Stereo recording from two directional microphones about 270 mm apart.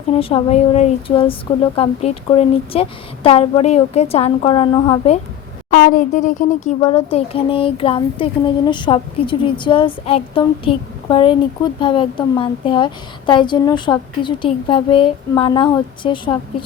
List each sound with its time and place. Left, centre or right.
0.1 s speech: left
5.7 s speech: left